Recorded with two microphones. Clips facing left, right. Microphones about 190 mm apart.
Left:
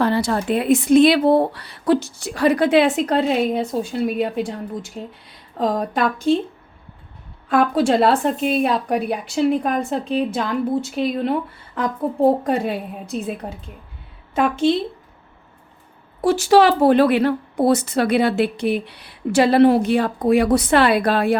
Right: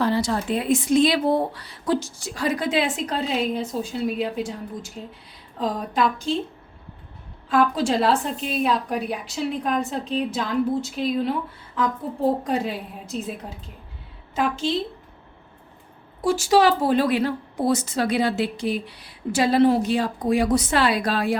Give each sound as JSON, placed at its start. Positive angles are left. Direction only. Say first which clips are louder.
{"t": 0.0, "sound": "a woman's voice", "louder": "left 3 dB", "side_deg": 60}
{"t": 7.4, "sound": "a woman's voice", "louder": "left 4 dB", "side_deg": 55}
{"t": 16.2, "sound": "a woman's voice", "louder": "left 4 dB", "side_deg": 60}